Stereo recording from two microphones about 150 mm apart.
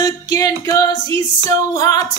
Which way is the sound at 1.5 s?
25° left (ahead or behind).